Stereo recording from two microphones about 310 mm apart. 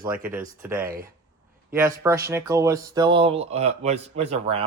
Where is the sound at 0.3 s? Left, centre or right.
Centre.